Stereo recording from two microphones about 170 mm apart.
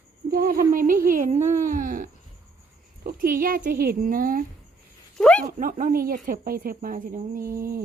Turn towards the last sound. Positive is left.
turn(degrees=-60)  # may be behind; listen again after turning